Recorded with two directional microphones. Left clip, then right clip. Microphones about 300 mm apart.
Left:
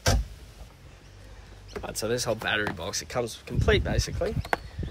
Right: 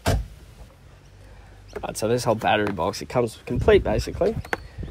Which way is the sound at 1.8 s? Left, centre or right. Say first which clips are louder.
Right 5 dB; centre.